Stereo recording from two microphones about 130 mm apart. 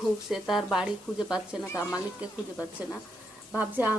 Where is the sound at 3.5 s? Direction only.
10° right (ahead or behind).